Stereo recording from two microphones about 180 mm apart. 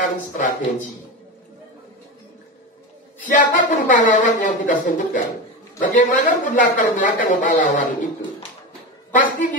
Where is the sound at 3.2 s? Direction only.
45° left (ahead or behind).